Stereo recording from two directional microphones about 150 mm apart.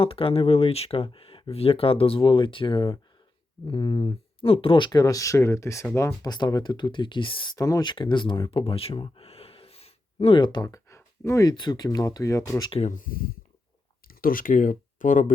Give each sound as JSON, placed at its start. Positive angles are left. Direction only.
{"t": 0.0, "sound": "speech", "side_deg": 40}
{"t": 6.2, "sound": "speech", "side_deg": 25}
{"t": 11.5, "sound": "speech", "side_deg": 30}
{"t": 12.9, "sound": "speech", "side_deg": 70}